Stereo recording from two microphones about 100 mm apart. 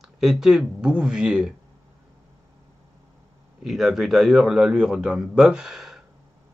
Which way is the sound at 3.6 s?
5° right (ahead or behind).